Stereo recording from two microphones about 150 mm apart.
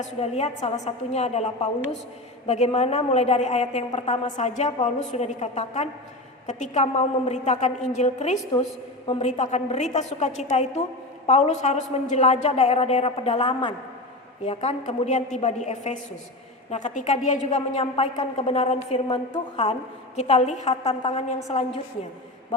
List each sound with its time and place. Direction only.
0.0 s a woman's voice: 45° left (ahead or behind)
9.0 s a woman's voice: 35° left (ahead or behind)
13.5 s a man's voice: 35° left (ahead or behind)